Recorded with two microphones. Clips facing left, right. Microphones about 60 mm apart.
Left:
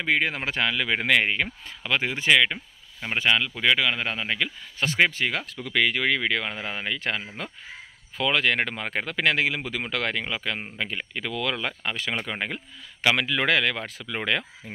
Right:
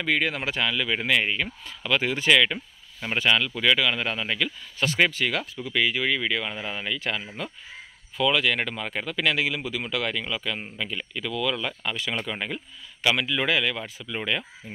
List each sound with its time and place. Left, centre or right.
0.0 s speech: left
1.8 s speech: left
5.6 s speech: left